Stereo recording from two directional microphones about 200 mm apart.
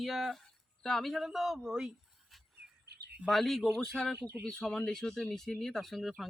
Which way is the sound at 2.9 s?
55° right (ahead or behind).